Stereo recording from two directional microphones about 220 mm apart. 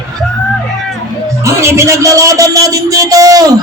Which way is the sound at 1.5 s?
15° right (ahead or behind).